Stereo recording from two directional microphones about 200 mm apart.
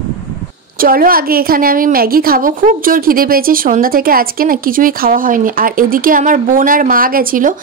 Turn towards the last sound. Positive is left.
turn(degrees=-45)  # may be behind; listen again after turning